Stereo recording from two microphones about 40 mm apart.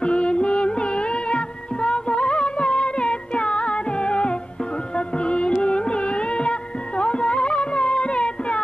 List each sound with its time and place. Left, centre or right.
0.0 s music: left